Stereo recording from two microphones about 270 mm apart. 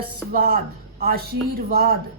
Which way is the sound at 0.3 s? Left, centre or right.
Right.